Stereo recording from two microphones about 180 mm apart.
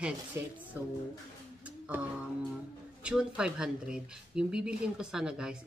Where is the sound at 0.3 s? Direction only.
15° right (ahead or behind).